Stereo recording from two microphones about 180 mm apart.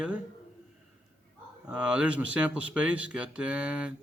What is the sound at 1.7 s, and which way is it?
Speech, 5° right (ahead or behind).